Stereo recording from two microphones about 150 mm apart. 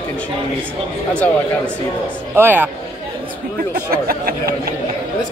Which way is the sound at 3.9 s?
80° right.